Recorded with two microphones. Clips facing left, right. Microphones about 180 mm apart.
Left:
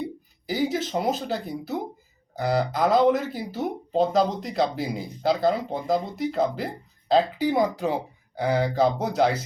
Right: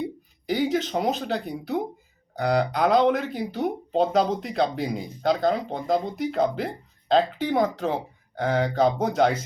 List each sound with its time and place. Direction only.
0.4 s speech: 5° left (ahead or behind)